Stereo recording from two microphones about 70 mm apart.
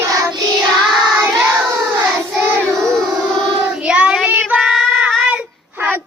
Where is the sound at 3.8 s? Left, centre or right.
Centre.